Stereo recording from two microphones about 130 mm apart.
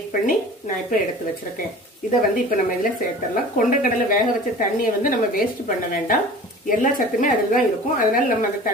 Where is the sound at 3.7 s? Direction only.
90° left.